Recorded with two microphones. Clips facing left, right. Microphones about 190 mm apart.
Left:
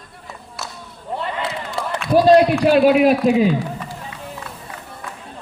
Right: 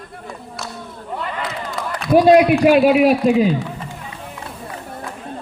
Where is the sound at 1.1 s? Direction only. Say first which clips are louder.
Left 1 dB; 30° left (ahead or behind).